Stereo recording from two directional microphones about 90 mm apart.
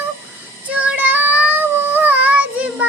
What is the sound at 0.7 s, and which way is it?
Child singing, 15° right (ahead or behind).